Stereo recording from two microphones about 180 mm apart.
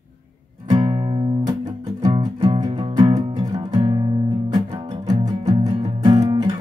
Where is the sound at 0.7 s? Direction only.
25° right (ahead or behind).